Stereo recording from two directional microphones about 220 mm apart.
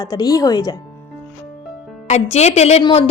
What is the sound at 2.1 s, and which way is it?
Speech, 30° left (ahead or behind).